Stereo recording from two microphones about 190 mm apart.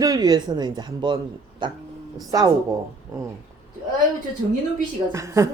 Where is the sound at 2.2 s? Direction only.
20° right (ahead or behind).